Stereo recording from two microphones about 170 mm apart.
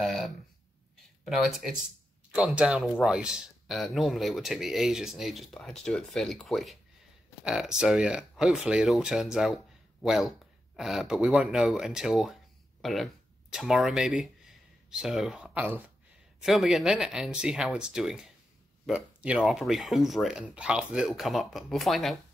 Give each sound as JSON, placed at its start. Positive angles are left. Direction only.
{"t": 0.0, "sound": "speech", "side_deg": 0}